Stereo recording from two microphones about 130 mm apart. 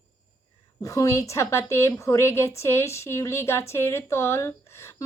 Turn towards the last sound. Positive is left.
turn(degrees=20)  # may be behind; listen again after turning